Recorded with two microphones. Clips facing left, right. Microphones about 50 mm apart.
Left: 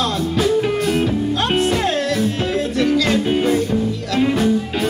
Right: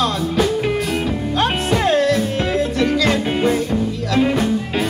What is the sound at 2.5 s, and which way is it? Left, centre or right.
Music, centre.